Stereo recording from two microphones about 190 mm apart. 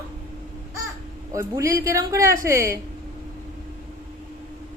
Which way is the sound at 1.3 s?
15° right (ahead or behind).